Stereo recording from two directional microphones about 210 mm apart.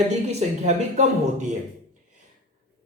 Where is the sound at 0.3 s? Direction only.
30° right (ahead or behind).